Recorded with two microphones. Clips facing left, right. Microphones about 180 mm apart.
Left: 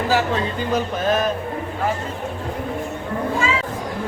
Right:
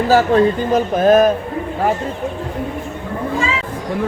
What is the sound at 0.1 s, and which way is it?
Speech, 50° right (ahead or behind).